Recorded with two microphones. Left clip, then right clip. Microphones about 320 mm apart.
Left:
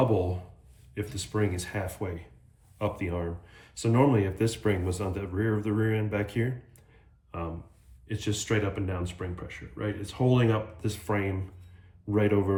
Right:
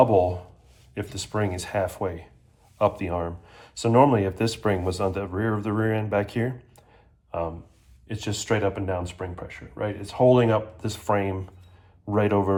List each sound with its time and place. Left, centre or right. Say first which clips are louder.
0.9 s speech: right 3 dB; centre